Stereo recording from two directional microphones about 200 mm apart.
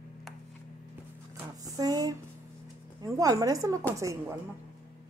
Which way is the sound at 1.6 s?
20° right (ahead or behind).